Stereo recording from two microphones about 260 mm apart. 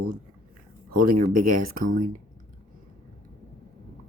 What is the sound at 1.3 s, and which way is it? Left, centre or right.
Speech, right.